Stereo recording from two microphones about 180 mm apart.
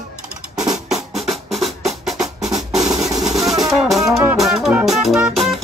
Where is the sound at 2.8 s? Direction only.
20° right (ahead or behind).